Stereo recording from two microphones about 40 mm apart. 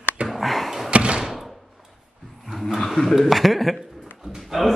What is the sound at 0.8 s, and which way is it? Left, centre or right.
Door, right.